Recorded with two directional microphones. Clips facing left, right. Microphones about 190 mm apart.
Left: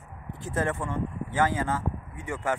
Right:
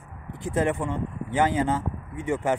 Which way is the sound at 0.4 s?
15° right (ahead or behind).